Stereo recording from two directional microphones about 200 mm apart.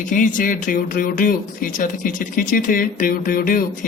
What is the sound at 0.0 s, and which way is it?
Speech, 40° left (ahead or behind).